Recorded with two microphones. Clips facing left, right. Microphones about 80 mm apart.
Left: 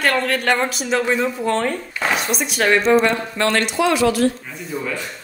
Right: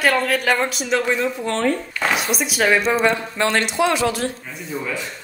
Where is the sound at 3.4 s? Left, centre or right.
Centre.